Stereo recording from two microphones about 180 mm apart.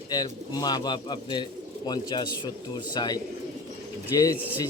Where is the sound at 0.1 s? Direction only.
25° left (ahead or behind).